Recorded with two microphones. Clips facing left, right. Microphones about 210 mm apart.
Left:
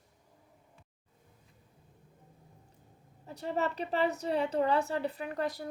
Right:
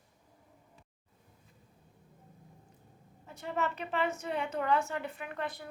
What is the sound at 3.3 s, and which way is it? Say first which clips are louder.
A woman's voice: left 2 dB; 35° left (ahead or behind).